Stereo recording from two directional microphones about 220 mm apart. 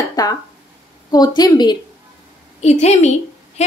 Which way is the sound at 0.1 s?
15° left (ahead or behind).